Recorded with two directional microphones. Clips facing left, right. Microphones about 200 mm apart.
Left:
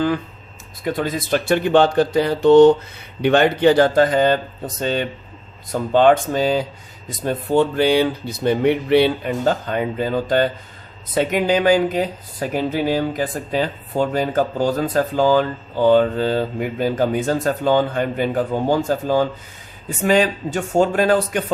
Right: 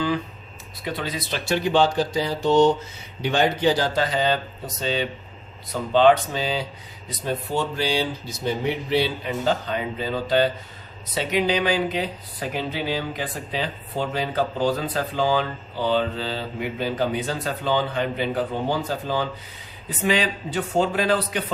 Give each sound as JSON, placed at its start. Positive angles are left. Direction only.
{"t": 0.9, "sound": "speech", "side_deg": 50}